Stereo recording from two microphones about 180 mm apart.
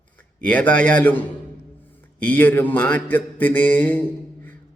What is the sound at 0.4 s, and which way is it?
Speech, 10° left (ahead or behind).